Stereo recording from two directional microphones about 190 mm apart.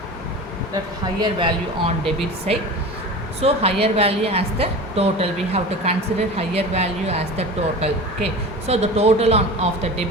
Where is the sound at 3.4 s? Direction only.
30° right (ahead or behind).